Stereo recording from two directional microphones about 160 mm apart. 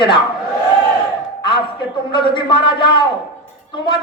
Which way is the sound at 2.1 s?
30° left (ahead or behind).